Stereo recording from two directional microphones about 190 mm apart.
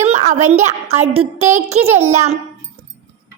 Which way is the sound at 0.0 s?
35° right (ahead or behind).